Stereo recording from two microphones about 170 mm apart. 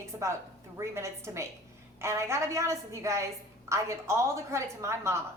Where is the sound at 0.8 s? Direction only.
15° right (ahead or behind).